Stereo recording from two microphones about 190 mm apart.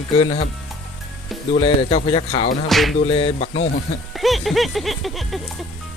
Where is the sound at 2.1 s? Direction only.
30° left (ahead or behind).